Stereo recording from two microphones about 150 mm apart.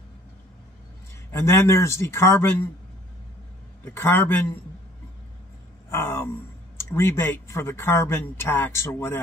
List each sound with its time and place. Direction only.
1.3 s speech: 15° left (ahead or behind)
3.8 s speech: 15° left (ahead or behind)
5.9 s a sound: 15° left (ahead or behind)
6.8 s speech: 15° left (ahead or behind)